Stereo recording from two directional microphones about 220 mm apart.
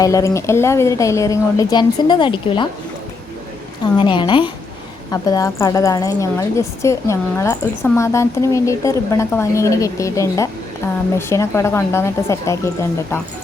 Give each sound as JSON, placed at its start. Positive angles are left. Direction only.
{"t": 0.0, "sound": "a woman's voice", "side_deg": 15}
{"t": 3.9, "sound": "a woman's voice", "side_deg": 20}